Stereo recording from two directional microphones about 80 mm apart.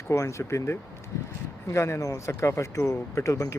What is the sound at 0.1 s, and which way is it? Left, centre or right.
Speech, left.